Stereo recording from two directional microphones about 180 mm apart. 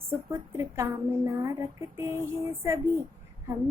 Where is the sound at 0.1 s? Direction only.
15° right (ahead or behind).